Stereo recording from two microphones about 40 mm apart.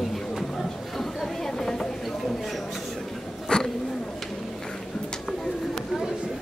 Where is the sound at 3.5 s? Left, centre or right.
Left.